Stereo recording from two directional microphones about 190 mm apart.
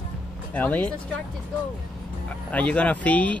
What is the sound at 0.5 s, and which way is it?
Speech, 10° left (ahead or behind).